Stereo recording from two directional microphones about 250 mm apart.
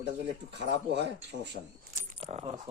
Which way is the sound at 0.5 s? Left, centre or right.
Right.